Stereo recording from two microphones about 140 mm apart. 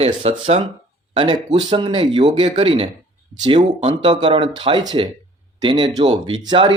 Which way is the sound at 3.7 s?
45° right (ahead or behind).